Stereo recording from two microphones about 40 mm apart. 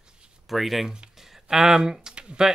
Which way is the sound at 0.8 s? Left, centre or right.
Centre.